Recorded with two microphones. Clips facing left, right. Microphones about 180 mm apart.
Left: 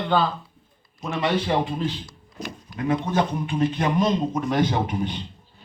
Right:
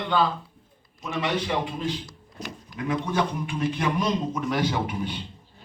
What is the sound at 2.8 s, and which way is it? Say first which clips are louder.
A man's voice: left 3 dB; 50° left (ahead or behind).